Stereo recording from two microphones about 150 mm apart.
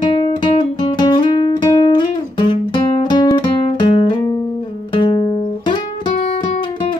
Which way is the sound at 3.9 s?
35° left (ahead or behind).